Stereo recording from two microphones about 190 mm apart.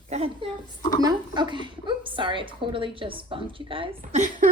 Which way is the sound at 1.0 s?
20° right (ahead or behind).